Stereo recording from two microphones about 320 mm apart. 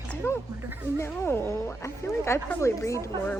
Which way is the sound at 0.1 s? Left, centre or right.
Centre.